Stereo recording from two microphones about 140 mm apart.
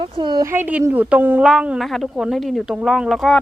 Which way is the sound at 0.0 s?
35° right (ahead or behind).